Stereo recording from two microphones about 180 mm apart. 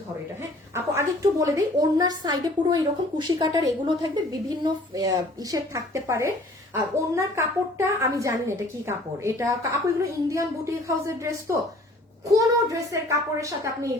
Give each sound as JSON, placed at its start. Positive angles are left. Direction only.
{"t": 0.7, "sound": "a woman's voice", "side_deg": -15}